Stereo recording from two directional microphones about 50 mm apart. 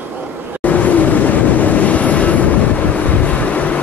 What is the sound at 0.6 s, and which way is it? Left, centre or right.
Vehicle, left.